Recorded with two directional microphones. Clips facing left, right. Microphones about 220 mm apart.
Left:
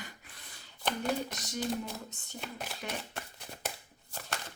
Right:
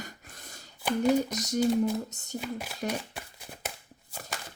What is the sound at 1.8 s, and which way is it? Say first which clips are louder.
Speech: right 13 dB; 40° right (ahead or behind).